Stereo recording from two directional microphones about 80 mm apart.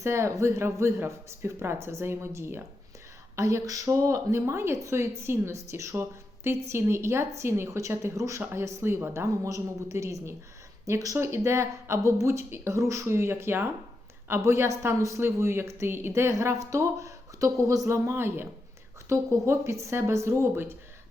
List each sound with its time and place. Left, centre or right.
0.0 s a woman's voice: right